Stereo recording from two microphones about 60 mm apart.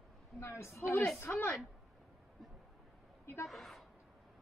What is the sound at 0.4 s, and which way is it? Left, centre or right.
Speech, left.